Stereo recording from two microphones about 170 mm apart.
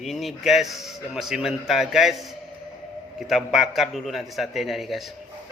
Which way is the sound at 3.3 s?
Centre (ahead or behind).